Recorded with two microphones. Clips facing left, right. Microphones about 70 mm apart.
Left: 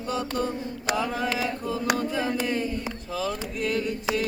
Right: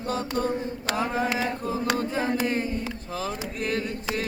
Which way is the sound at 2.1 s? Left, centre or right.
Right.